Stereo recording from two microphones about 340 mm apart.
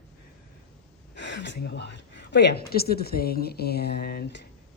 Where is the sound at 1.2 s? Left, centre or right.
Left.